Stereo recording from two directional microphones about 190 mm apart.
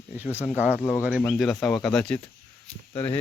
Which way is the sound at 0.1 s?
10° right (ahead or behind).